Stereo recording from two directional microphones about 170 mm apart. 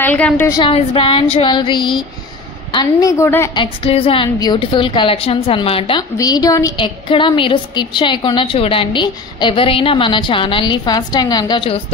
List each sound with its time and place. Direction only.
0.0 s a woman's voice: 10° left (ahead or behind)
0.5 s a woman's voice: 30° left (ahead or behind)
3.5 s a woman's voice: 35° left (ahead or behind)